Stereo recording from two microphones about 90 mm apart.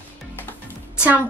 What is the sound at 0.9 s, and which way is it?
Music, 15° right (ahead or behind).